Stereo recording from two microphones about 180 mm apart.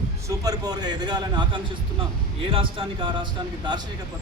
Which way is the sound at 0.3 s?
20° right (ahead or behind).